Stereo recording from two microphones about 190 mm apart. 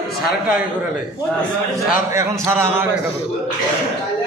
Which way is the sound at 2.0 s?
15° right (ahead or behind).